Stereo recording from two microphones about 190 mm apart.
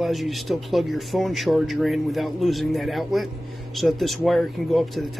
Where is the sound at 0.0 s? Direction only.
Centre (ahead or behind).